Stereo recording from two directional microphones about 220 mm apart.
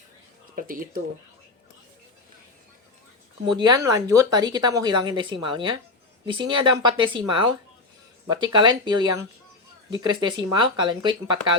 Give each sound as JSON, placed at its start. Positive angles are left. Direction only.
{"t": 0.5, "sound": "speech", "side_deg": -40}
{"t": 3.4, "sound": "speech", "side_deg": -20}